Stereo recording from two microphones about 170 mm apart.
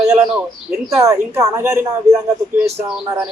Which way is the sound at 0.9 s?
20° right (ahead or behind).